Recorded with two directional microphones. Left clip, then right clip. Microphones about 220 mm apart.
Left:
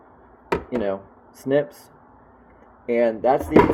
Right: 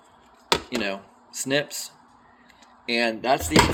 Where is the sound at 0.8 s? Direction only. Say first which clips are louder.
Left 4 dB; 65° right (ahead or behind).